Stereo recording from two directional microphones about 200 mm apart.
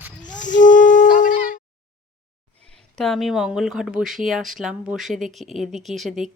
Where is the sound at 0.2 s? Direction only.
40° left (ahead or behind).